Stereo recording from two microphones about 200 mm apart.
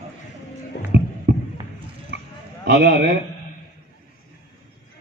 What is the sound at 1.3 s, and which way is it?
Fireworks, 60° right (ahead or behind).